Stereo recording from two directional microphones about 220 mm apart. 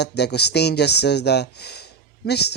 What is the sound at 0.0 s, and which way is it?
Speech, 50° left (ahead or behind).